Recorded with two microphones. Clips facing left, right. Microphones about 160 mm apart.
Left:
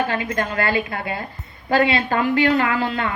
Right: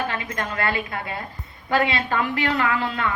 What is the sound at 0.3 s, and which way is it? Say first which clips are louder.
Speech: left 3 dB; 30° left (ahead or behind).